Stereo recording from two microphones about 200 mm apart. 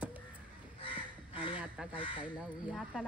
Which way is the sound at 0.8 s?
25° left (ahead or behind).